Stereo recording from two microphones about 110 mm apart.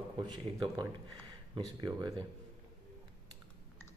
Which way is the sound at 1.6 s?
40° right (ahead or behind).